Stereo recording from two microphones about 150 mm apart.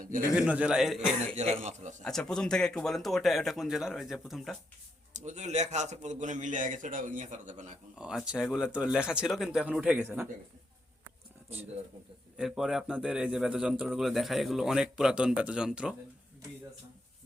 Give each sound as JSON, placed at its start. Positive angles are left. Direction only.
{"t": 0.0, "sound": "a man's voice", "side_deg": -65}
{"t": 0.3, "sound": "a man's voice", "side_deg": -10}
{"t": 1.4, "sound": "speech", "side_deg": -50}
{"t": 2.0, "sound": "speech", "side_deg": 5}
{"t": 5.1, "sound": "a man's voice", "side_deg": -50}
{"t": 7.9, "sound": "speech", "side_deg": -5}
{"t": 12.4, "sound": "speech", "side_deg": 0}